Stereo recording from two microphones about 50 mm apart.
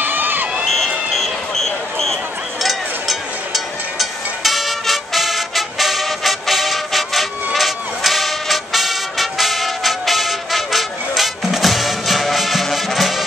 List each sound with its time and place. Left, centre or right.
0.0 s crowd: right
0.7 s a sound: centre
2.6 s music: centre